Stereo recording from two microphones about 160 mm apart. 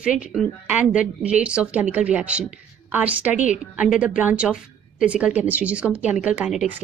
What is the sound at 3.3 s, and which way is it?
Speech, 50° left (ahead or behind).